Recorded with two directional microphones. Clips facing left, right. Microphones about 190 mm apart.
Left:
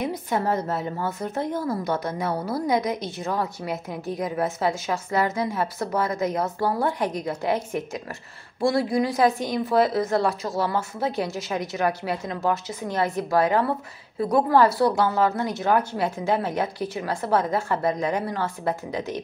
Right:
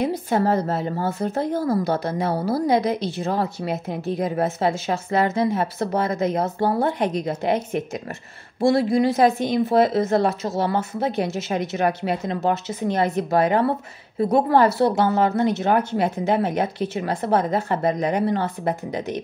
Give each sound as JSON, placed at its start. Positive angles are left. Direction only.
{"t": 0.0, "sound": "a woman's voice", "side_deg": -30}